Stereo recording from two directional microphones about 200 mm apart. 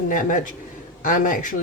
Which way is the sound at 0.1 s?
40° left (ahead or behind).